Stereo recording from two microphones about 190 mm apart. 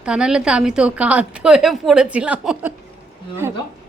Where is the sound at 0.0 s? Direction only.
5° right (ahead or behind).